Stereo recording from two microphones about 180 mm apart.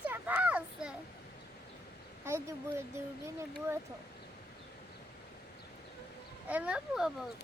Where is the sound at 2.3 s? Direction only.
15° right (ahead or behind).